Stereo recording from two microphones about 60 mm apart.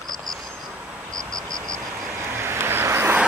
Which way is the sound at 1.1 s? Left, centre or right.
Right.